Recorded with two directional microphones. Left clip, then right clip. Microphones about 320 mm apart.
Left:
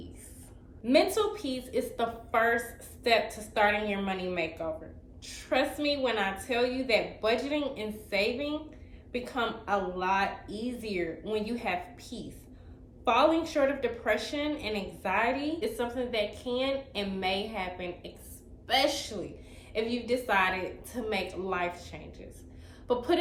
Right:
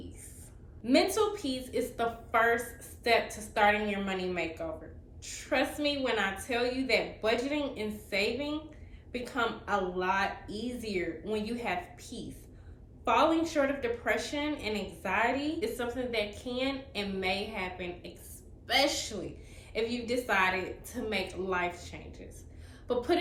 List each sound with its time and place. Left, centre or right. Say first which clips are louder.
0.9 s a woman's voice: left 2 dB; centre